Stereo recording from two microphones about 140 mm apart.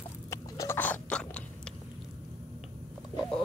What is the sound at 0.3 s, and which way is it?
Biting, 20° left (ahead or behind).